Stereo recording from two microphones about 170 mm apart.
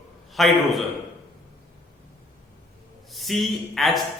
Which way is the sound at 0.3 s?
Centre (ahead or behind).